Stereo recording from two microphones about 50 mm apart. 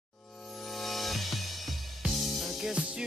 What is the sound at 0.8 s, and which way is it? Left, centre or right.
Music, centre.